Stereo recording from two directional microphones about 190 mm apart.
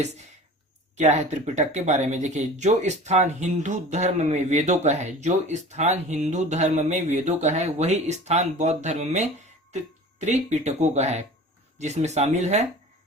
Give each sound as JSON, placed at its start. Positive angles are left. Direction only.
{"t": 0.9, "sound": "speech", "side_deg": -40}